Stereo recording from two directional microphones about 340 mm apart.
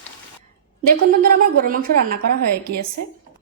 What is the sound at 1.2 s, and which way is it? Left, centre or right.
Speech, right.